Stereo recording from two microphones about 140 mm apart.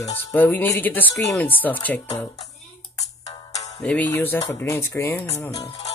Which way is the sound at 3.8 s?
10° left (ahead or behind).